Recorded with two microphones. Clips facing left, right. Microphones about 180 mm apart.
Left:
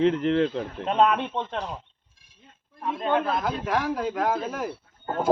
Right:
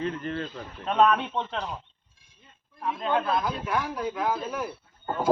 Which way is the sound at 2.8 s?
25° left (ahead or behind).